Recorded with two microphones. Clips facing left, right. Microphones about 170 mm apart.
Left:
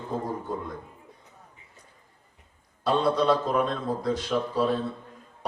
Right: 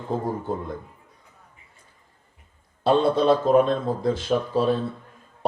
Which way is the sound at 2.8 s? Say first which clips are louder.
Right 4 dB; 25° right (ahead or behind).